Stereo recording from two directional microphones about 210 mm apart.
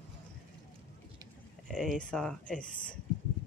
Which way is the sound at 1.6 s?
Centre (ahead or behind).